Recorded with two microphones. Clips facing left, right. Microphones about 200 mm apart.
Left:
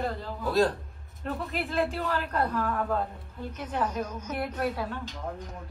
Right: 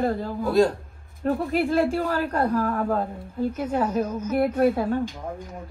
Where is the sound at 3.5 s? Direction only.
10° right (ahead or behind).